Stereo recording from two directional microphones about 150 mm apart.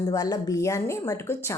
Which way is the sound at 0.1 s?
25° left (ahead or behind).